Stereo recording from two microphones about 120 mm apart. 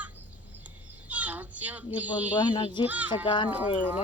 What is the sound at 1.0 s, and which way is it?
Children playing, 10° right (ahead or behind).